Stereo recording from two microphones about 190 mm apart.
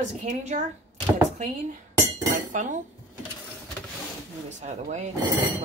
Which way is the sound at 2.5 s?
40° right (ahead or behind).